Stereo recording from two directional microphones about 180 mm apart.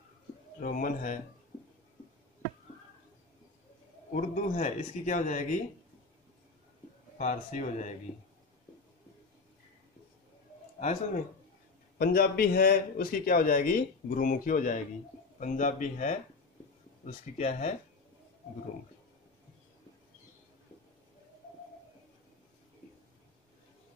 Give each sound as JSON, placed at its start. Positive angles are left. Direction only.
{"t": 0.6, "sound": "a man's voice", "side_deg": 50}
{"t": 4.1, "sound": "a man's voice", "side_deg": 45}
{"t": 7.2, "sound": "a man's voice", "side_deg": 40}
{"t": 12.0, "sound": "a man's voice", "side_deg": 55}